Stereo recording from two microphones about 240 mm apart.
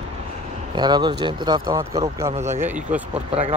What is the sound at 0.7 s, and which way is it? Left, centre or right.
Speech, centre.